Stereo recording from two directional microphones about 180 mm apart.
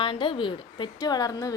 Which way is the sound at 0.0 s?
30° left (ahead or behind).